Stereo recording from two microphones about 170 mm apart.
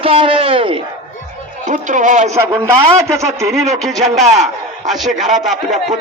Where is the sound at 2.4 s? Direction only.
15° right (ahead or behind).